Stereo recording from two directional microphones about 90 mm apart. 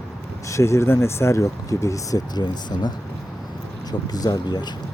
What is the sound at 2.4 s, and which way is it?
Speech, 50° left (ahead or behind).